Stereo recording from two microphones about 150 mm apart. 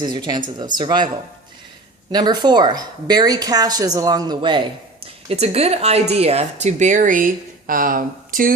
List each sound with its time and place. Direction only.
0.0 s a woman's voice: 30° right (ahead or behind)
2.1 s a woman's voice: 30° right (ahead or behind)
5.0 s speech: 40° right (ahead or behind); by 8.5 s 70° right (ahead or behind)